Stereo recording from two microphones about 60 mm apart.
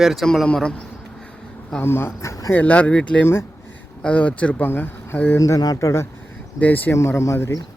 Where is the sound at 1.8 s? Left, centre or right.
Left.